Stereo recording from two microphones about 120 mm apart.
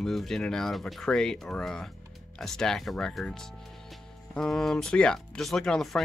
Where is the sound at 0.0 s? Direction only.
Centre (ahead or behind).